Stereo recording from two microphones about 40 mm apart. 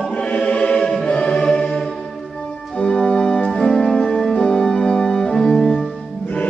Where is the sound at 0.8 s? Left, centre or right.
Centre.